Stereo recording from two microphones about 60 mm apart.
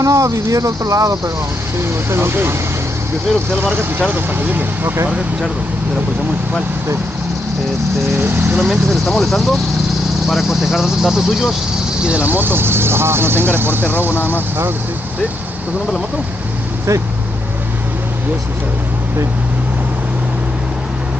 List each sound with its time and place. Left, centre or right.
0.0 s speech: right
1.8 s speech: right
3.7 s speech: right
8.2 s speech: right
8.6 s speech: centre
12.0 s speech: right
12.4 s speech: right
14.1 s speech: left